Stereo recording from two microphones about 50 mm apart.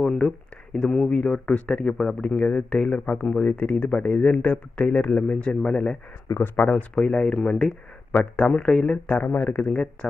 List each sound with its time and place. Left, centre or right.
0.0 s speech: centre
0.8 s speech: left
6.4 s speech: left
6.7 s speech: left
9.2 s speech: left